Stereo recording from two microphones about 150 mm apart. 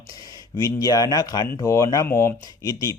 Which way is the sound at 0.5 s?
25° left (ahead or behind).